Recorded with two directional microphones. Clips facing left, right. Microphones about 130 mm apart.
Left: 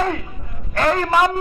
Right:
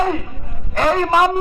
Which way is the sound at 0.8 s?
20° right (ahead or behind).